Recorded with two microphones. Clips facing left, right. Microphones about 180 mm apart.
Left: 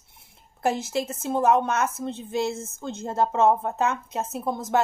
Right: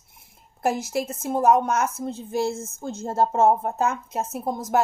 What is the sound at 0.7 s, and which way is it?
A woman's voice, 25° left (ahead or behind).